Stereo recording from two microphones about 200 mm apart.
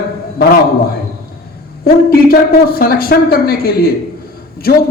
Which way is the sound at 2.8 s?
50° left (ahead or behind).